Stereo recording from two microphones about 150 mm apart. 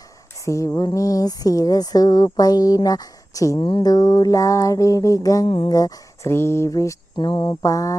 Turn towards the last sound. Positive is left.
turn(degrees=20)  # may be behind; listen again after turning